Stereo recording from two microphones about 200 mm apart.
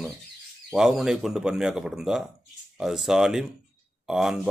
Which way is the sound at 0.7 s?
Centre (ahead or behind).